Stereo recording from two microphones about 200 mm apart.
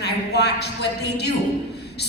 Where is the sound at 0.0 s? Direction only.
55° left (ahead or behind).